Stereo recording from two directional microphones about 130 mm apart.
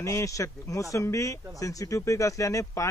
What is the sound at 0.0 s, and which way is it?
A man's voice, 25° left (ahead or behind).